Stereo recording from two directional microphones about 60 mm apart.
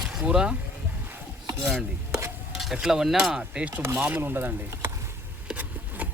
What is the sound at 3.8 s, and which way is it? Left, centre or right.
Speech, right.